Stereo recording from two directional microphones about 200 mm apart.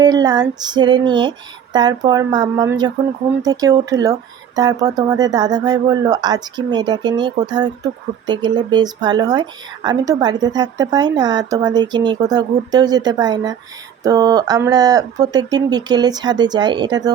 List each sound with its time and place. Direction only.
0.0 s speech: 20° right (ahead or behind)